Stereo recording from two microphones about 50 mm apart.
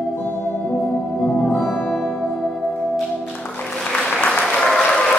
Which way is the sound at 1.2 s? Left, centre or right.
Centre.